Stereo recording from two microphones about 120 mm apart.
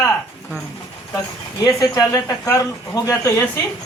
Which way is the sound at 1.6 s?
30° left (ahead or behind).